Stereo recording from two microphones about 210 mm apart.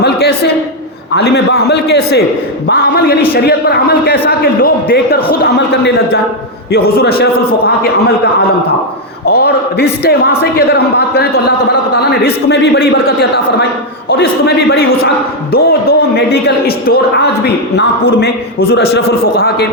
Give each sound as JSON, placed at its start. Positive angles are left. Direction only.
{"t": 0.0, "sound": "a sound", "side_deg": 50}
{"t": 1.1, "sound": "a man's voice", "side_deg": 50}
{"t": 9.3, "sound": "a man's voice", "side_deg": 50}